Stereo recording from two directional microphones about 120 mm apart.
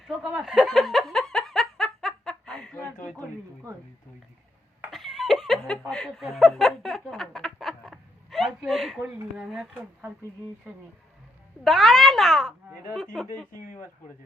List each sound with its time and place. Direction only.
0.1 s a sound: 5° right (ahead or behind)
3.2 s a woman's voice: 25° right (ahead or behind)
4.9 s laughter: centre (ahead or behind)
5.9 s speech: 5° left (ahead or behind)
11.6 s a child's voice: centre (ahead or behind)